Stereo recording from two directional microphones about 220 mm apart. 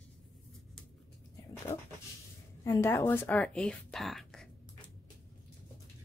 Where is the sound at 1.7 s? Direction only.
30° left (ahead or behind).